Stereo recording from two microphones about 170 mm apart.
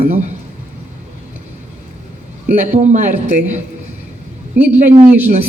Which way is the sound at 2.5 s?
45° right (ahead or behind).